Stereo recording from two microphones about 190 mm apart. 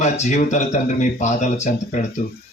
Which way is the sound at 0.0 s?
35° left (ahead or behind).